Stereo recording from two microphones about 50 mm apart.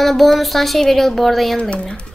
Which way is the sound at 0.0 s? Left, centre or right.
Centre.